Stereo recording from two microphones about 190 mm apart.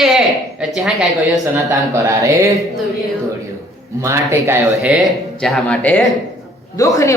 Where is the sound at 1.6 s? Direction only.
15° right (ahead or behind).